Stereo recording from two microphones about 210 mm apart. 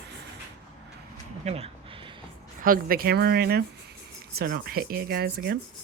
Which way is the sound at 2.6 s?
45° right (ahead or behind).